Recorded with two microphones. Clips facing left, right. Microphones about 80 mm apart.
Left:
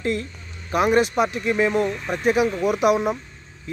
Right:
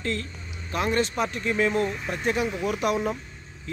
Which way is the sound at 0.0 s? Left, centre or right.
Centre.